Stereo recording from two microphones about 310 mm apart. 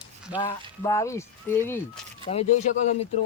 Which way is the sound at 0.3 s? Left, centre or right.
Centre.